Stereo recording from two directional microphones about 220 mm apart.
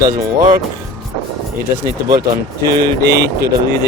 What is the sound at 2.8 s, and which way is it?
Speech, 50° right (ahead or behind).